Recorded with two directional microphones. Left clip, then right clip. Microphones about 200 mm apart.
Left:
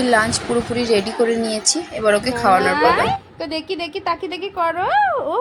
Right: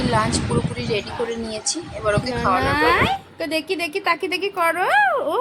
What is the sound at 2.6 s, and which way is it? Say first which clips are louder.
A woman's voice: left 2 dB; centre (ahead or behind).